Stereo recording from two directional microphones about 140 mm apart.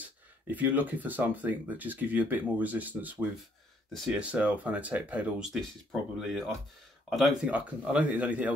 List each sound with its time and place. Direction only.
0.0 s speech: 10° right (ahead or behind)